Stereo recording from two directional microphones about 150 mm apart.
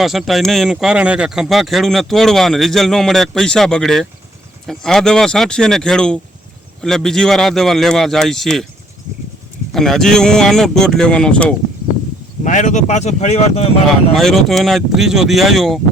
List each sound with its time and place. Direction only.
0.0 s speech: centre (ahead or behind)
9.7 s speech: 5° left (ahead or behind)
12.5 s speech: 55° left (ahead or behind)
14.1 s speech: centre (ahead or behind)